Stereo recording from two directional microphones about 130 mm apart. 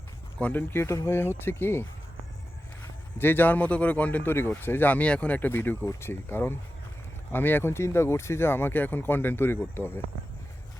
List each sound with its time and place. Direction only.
0.3 s speech: 15° left (ahead or behind)
3.2 s speech: 15° left (ahead or behind)